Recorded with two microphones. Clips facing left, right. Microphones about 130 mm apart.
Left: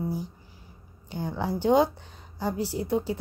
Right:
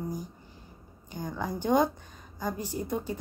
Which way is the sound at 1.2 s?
10° left (ahead or behind).